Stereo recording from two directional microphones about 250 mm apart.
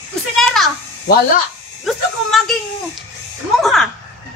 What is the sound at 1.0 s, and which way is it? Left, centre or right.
Speech, left.